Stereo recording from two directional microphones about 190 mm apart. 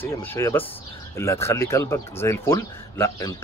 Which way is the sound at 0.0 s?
10° left (ahead or behind).